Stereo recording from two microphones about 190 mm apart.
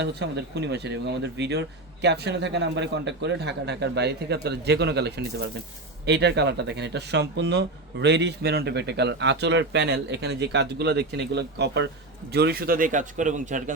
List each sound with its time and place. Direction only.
0.0 s a man's voice: 60° right (ahead or behind); by 13.7 s 40° right (ahead or behind)